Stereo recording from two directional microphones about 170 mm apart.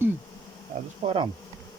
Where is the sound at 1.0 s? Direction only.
30° right (ahead or behind).